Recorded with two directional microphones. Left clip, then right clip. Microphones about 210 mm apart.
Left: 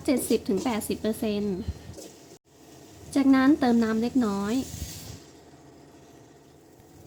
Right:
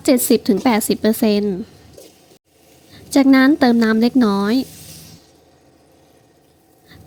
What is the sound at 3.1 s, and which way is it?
A woman's voice, 35° right (ahead or behind).